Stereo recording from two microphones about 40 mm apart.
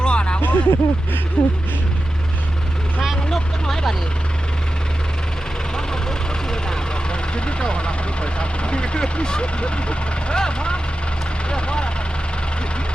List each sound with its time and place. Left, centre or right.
0.0 s a sound: left
0.4 s speech: left
3.2 s vehicle: centre
5.7 s speech: centre